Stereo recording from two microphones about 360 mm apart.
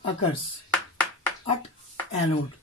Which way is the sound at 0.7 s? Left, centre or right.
Centre.